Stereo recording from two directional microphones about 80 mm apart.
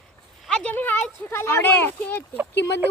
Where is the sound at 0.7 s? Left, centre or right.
Left.